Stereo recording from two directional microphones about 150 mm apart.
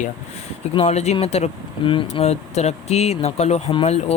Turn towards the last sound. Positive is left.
turn(degrees=45)  # may be behind; listen again after turning